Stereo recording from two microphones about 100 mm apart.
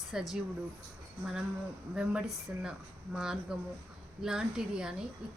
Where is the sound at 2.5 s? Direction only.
15° right (ahead or behind).